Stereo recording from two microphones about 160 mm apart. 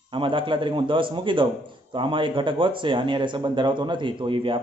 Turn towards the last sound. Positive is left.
turn(degrees=-30)  # may be behind; listen again after turning